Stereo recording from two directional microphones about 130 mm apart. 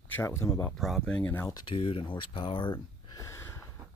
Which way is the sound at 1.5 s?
30° left (ahead or behind).